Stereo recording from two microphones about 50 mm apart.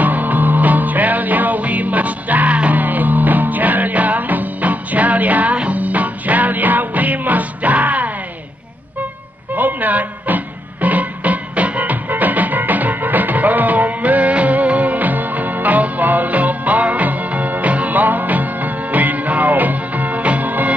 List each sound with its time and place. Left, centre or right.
0.0 s music: right
9.6 s music: right